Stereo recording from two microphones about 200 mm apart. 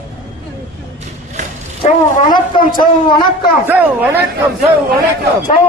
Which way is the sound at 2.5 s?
20° left (ahead or behind).